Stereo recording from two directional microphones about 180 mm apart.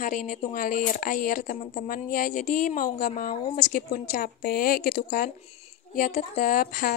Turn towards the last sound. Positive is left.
turn(degrees=50)  # may be behind; listen again after turning